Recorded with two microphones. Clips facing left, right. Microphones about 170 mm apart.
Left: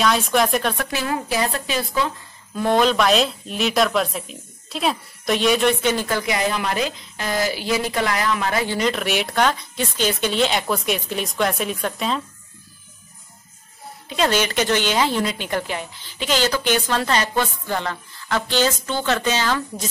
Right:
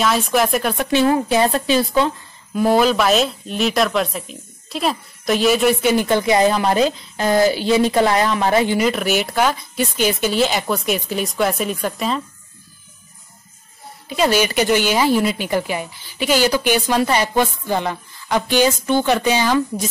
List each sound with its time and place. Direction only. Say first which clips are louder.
0.0 s speech: right 1 dB; centre (ahead or behind)
0.7 s a woman's voice: right 9 dB; 30° right (ahead or behind)
2.5 s speech: right 3 dB; 5° right (ahead or behind)
6.0 s a woman's voice: right 7 dB; 25° right (ahead or behind)
8.6 s speech: right 4 dB; 10° right (ahead or behind)
14.0 s a woman's voice: right 3 dB; 5° right (ahead or behind)